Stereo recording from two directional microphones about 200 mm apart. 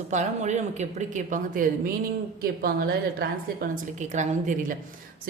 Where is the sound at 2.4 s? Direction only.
50° right (ahead or behind).